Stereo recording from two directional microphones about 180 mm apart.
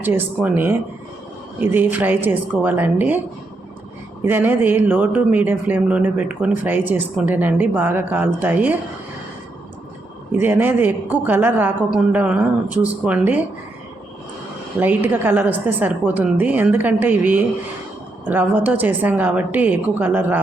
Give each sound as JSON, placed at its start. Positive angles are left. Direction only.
{"t": 0.0, "sound": "speech", "side_deg": -10}
{"t": 4.3, "sound": "speech", "side_deg": -10}
{"t": 10.4, "sound": "speech", "side_deg": -10}
{"t": 14.8, "sound": "speech", "side_deg": -10}